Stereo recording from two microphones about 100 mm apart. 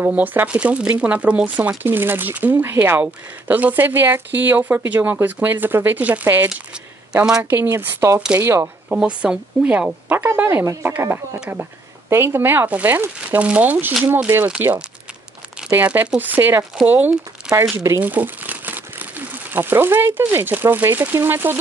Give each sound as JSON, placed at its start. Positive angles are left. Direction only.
{"t": 0.0, "sound": "speech", "side_deg": -15}
{"t": 7.1, "sound": "a woman's voice", "side_deg": -10}
{"t": 7.4, "sound": "speech", "side_deg": -20}
{"t": 8.8, "sound": "speech", "side_deg": -10}
{"t": 15.7, "sound": "speech", "side_deg": -15}
{"t": 17.5, "sound": "speech", "side_deg": -5}